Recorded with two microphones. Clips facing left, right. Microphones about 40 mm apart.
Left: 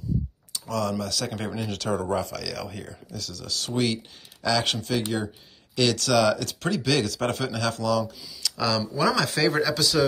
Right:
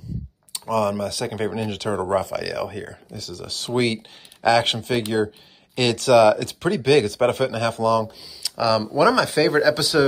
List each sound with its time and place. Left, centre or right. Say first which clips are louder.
0.5 s speech: right 6 dB; right
3.2 s speech: right 3 dB; centre
3.4 s speech: right 4 dB; right